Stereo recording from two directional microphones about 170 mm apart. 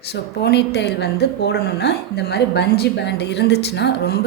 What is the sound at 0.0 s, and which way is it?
A woman's voice, 75° left (ahead or behind).